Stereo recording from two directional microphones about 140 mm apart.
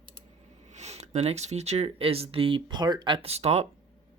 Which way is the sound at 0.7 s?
50° right (ahead or behind).